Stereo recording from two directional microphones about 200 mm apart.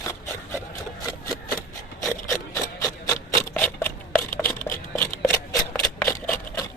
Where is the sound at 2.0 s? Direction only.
15° left (ahead or behind).